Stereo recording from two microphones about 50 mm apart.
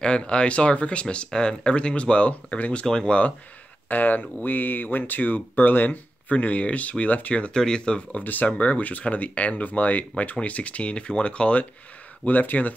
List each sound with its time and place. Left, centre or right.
0.0 s speech: centre
3.9 s speech: left
7.5 s speech: centre
8.2 s speech: left
8.5 s speech: left
12.3 s speech: left